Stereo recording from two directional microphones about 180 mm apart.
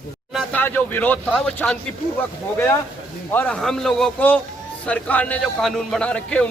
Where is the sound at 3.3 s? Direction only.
10° left (ahead or behind).